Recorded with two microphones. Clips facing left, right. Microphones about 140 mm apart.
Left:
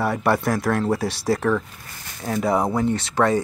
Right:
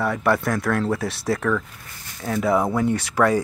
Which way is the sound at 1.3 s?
25° left (ahead or behind).